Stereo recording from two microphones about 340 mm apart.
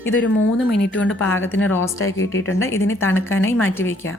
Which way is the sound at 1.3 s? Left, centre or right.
Centre.